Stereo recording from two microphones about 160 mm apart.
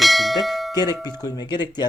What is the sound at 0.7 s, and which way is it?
Speech, 25° left (ahead or behind).